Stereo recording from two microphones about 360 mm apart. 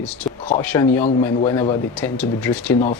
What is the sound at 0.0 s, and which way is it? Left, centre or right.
Speech, centre.